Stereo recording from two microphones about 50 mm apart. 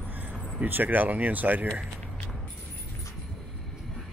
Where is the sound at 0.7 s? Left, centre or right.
Right.